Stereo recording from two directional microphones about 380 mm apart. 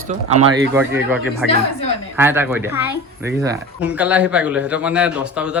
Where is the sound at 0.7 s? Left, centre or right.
Centre.